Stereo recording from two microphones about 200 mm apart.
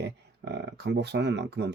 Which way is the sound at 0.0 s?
60° right (ahead or behind).